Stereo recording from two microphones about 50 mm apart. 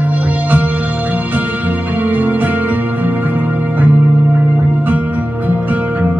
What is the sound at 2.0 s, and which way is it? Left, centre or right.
Music, right.